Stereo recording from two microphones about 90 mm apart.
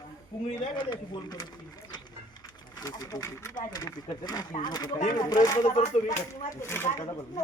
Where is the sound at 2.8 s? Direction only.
40° left (ahead or behind).